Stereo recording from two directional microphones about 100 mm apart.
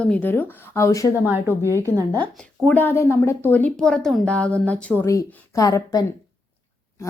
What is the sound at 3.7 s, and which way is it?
Speech, 5° left (ahead or behind).